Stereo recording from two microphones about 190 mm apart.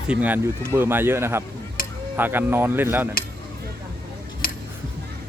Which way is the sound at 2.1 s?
10° right (ahead or behind).